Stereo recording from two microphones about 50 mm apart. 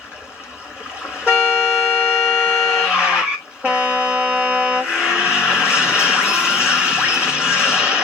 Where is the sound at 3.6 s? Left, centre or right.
Right.